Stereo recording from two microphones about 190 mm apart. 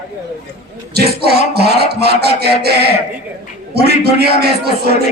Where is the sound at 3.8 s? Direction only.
60° right (ahead or behind).